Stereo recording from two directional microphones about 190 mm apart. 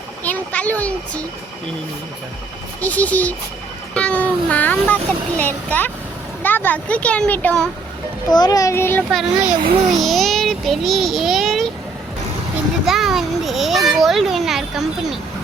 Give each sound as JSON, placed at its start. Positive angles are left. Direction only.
{"t": 0.3, "sound": "a child's voice", "side_deg": 10}
{"t": 2.8, "sound": "a child's voice", "side_deg": 10}
{"t": 8.3, "sound": "speech", "side_deg": 20}
{"t": 9.1, "sound": "a child's voice", "side_deg": -5}
{"t": 12.8, "sound": "a child's voice", "side_deg": 0}